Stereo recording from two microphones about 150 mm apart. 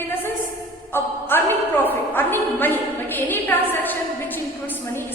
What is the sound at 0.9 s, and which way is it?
A woman's voice, 15° left (ahead or behind).